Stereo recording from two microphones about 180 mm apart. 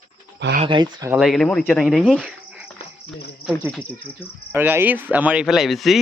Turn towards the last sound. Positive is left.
turn(degrees=0)  # may be behind; listen again after turning